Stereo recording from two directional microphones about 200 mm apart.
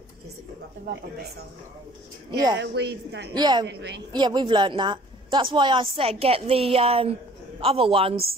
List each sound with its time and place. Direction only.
2.3 s a woman's voice: 20° right (ahead or behind)
2.6 s a woman's voice: 55° right (ahead or behind)
3.3 s a woman's voice: 20° right (ahead or behind)
3.6 s a woman's voice: 60° right (ahead or behind)
4.1 s a woman's voice: 20° right (ahead or behind)